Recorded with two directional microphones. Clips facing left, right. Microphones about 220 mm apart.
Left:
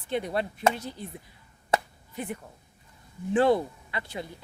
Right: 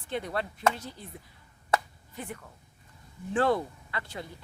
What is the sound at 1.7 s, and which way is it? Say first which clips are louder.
Finger snapping: left 2 dB; 20° left (ahead or behind).